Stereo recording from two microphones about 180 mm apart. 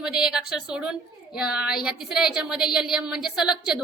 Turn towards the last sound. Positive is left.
turn(degrees=-5)  # may be behind; listen again after turning